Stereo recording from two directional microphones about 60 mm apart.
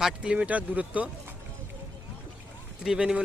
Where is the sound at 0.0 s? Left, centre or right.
Centre.